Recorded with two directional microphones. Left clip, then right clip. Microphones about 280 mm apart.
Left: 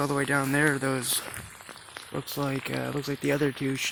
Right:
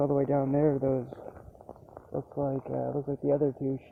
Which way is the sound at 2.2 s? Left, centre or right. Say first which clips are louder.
Even; left.